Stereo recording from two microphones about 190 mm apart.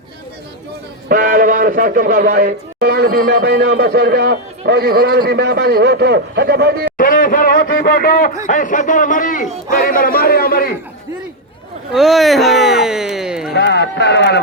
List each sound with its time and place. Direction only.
1.0 s a man's voice: 45° right (ahead or behind)
6.9 s speech: 45° left (ahead or behind)
11.9 s speech: centre (ahead or behind)
13.5 s speech: 60° left (ahead or behind)